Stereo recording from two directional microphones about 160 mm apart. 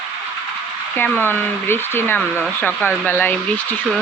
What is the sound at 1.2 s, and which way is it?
Speech, 15° left (ahead or behind).